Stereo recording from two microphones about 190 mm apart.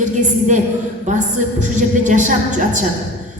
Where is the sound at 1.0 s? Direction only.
40° right (ahead or behind).